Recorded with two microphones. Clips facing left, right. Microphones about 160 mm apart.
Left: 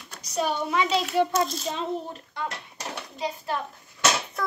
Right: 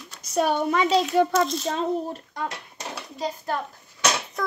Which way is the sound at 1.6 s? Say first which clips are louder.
Right 4 dB; 40° right (ahead or behind).